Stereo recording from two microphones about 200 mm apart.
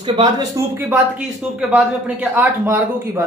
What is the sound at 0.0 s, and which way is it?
Speech, 20° right (ahead or behind).